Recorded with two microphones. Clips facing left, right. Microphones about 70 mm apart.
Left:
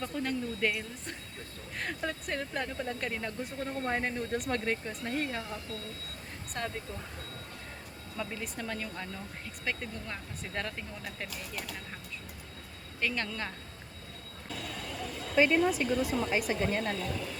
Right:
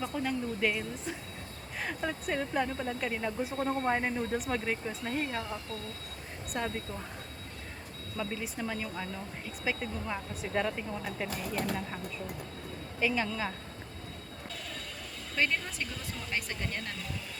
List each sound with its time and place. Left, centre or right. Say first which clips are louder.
0.0 s a woman's voice: right 1 dB; centre
6.5 s speech: right 2 dB; centre
8.2 s speech: right 2 dB; centre
11.3 s speech: right 7 dB; right
13.0 s speech: right 3 dB; centre
15.4 s speech: left 7 dB; centre